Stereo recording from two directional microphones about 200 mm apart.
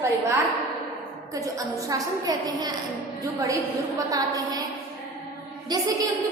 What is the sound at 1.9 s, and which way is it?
Speech, 20° right (ahead or behind).